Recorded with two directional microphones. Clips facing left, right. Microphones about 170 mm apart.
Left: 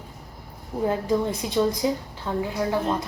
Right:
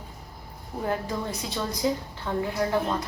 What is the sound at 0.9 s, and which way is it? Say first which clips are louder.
A woman's voice: left 6 dB; 20° left (ahead or behind).